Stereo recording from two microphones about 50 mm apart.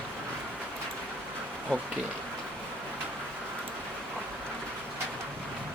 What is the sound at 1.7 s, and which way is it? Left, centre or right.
Speech, left.